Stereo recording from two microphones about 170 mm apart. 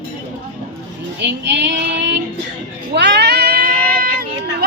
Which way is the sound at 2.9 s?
85° right.